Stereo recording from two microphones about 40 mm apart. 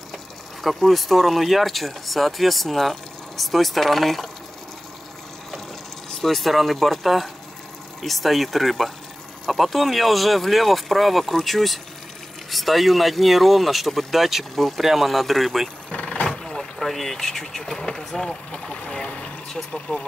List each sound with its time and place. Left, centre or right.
0.6 s speech: centre
6.2 s speech: centre
16.0 s vehicle: left
16.3 s speech: centre